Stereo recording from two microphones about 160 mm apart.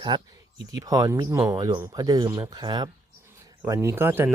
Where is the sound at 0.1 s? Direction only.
30° right (ahead or behind).